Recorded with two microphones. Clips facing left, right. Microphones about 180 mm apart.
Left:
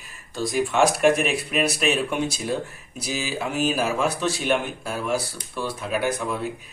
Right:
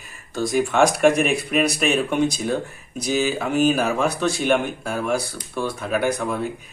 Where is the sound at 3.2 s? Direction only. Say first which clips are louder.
Right 6 dB; 45° right (ahead or behind).